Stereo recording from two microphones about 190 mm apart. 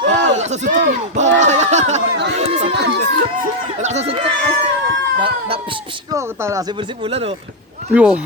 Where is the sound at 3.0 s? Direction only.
45° right (ahead or behind).